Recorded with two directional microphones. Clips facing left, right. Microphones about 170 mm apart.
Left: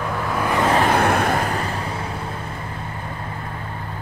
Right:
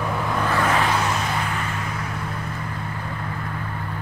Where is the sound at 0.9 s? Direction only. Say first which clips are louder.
Left 6 dB; 60° left (ahead or behind); by 1.8 s 35° left (ahead or behind).